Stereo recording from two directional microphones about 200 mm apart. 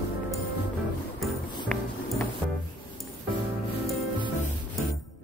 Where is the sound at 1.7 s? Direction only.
5° left (ahead or behind).